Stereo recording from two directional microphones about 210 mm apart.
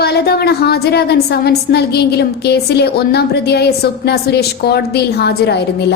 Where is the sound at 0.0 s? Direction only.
50° left (ahead or behind).